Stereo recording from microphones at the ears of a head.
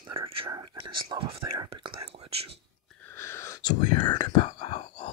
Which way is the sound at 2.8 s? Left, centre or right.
Left.